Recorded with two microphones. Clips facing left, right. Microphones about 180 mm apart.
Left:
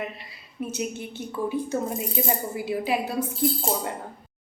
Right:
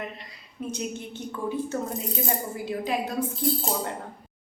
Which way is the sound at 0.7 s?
10° left (ahead or behind).